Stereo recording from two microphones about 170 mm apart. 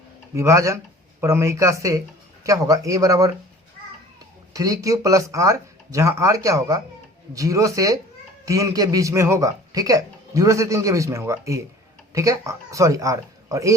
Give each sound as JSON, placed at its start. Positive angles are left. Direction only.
{"t": 0.3, "sound": "a man's voice", "side_deg": -15}
{"t": 4.5, "sound": "a man's voice", "side_deg": -20}